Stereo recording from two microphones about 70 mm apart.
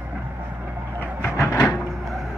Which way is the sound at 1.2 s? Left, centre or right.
Left.